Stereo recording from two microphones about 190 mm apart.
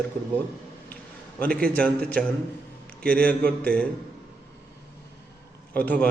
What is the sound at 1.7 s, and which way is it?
A man's voice, 5° left (ahead or behind).